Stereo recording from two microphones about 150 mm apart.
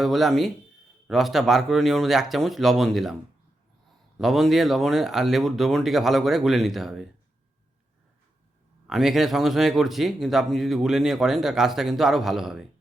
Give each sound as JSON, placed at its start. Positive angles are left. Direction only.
{"t": 0.0, "sound": "speech", "side_deg": 0}
{"t": 4.2, "sound": "speech", "side_deg": 0}
{"t": 8.9, "sound": "speech", "side_deg": 0}